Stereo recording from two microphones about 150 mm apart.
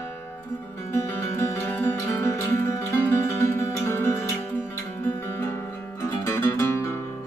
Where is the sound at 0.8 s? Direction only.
15° left (ahead or behind).